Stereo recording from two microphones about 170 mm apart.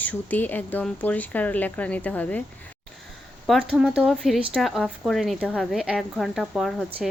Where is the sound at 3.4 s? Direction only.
Centre (ahead or behind).